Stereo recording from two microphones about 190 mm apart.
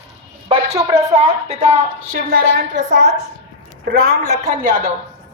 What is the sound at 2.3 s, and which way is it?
A woman's voice, 45° right (ahead or behind).